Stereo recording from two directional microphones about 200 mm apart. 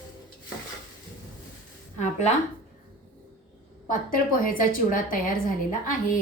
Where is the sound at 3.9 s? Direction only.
45° left (ahead or behind).